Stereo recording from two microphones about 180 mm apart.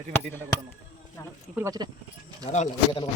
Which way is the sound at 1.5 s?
20° right (ahead or behind).